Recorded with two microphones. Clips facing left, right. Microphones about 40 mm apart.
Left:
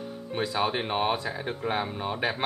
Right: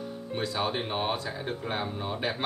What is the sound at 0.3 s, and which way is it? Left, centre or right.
Speech, centre.